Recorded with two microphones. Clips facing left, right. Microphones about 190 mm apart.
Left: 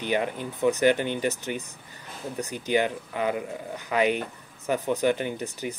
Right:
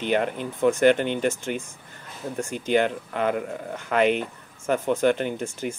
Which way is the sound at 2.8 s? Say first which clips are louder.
Right 3 dB; 10° left (ahead or behind).